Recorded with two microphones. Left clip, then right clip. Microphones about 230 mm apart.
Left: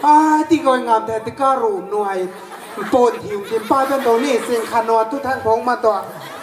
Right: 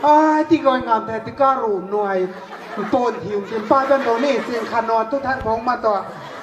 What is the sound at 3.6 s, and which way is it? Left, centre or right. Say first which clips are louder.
Speech: even; left.